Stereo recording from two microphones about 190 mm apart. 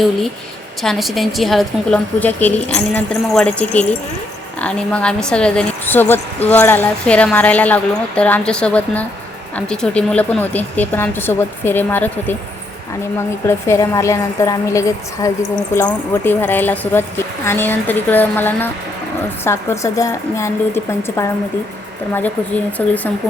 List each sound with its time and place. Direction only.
0.8 s a woman's voice: centre (ahead or behind)
13.5 s a woman's voice: 15° left (ahead or behind)
22.8 s a woman's voice: 5° left (ahead or behind)